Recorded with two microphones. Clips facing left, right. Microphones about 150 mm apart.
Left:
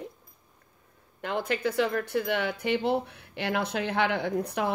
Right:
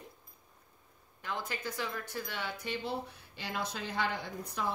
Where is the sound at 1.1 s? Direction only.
70° left (ahead or behind).